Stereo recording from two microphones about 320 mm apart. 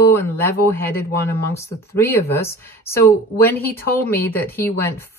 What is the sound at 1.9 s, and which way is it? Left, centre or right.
Speech, centre.